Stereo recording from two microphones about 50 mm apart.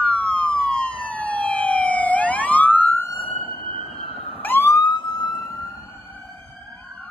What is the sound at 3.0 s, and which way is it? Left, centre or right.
Police car, left.